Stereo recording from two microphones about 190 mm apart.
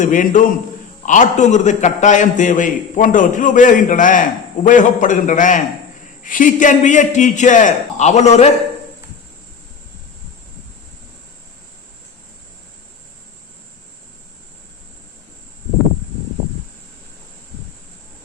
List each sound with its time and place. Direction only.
0.0 s a man's voice: 40° left (ahead or behind)